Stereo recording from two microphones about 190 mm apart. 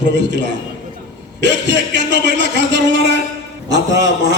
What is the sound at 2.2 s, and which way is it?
Speech, 65° right (ahead or behind).